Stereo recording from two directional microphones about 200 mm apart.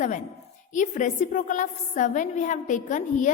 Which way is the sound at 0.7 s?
40° left (ahead or behind).